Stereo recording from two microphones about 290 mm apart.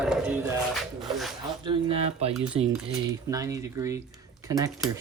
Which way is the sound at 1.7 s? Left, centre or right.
Centre.